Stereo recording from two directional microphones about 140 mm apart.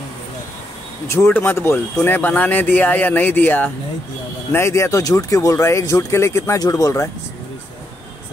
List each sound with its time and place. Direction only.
1.0 s speech: 20° left (ahead or behind)